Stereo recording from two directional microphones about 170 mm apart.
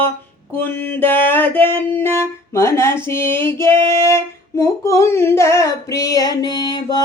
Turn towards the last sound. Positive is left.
turn(degrees=25)  # may be behind; listen again after turning